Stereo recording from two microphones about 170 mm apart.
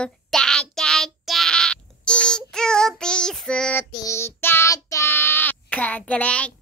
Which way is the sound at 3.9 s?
20° left (ahead or behind).